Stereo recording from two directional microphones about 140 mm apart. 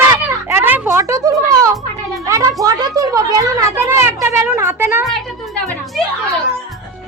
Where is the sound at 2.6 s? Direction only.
25° right (ahead or behind).